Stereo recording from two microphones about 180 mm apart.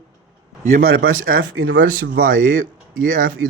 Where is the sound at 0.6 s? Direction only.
55° right (ahead or behind); by 1.8 s 90° right.